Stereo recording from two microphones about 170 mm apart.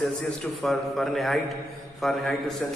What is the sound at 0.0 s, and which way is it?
A man's voice, centre (ahead or behind).